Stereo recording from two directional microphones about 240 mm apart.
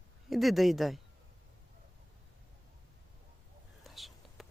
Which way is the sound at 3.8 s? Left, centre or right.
Centre.